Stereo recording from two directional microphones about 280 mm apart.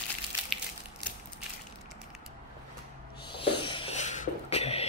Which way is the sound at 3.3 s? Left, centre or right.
Centre.